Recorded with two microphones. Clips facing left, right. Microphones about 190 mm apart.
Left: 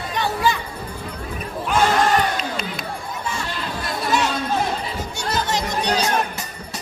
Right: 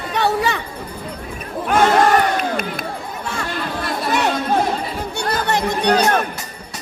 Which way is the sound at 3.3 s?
60° right (ahead or behind).